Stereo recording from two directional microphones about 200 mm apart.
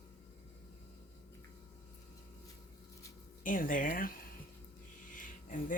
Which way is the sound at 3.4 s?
45° left (ahead or behind).